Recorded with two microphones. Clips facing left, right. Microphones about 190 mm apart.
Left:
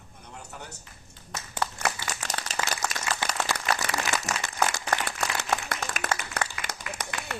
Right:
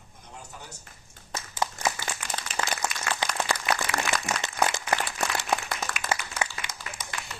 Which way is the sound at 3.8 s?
70° left (ahead or behind).